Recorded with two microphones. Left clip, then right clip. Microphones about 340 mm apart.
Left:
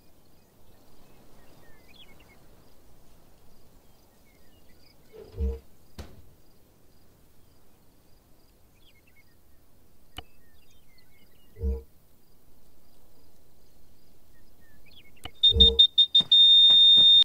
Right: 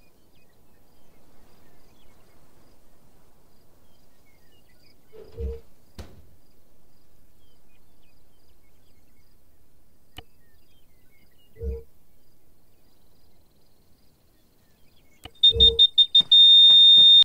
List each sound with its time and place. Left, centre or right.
5.1 s insect: centre
15.2 s alarm: centre